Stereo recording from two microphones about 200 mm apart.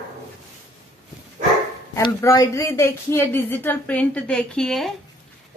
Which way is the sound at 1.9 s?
15° left (ahead or behind).